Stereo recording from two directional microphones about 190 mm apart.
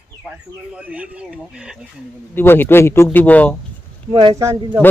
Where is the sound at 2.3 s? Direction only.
10° left (ahead or behind).